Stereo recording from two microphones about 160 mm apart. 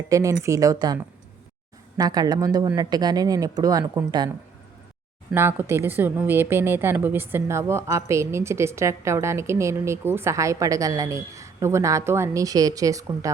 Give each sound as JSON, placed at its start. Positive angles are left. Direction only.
{"t": 0.1, "sound": "a woman's voice", "side_deg": -20}
{"t": 2.0, "sound": "a woman's voice", "side_deg": -25}
{"t": 5.3, "sound": "a woman's voice", "side_deg": -15}